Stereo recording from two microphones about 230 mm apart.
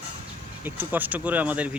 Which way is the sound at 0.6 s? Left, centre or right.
Centre.